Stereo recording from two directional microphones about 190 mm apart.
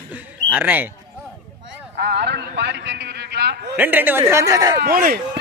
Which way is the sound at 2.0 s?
60° right (ahead or behind).